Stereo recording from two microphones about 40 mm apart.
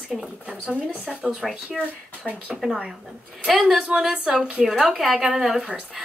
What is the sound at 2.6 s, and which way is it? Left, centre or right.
Speech, centre.